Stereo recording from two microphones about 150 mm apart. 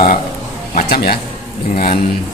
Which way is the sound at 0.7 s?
85° left.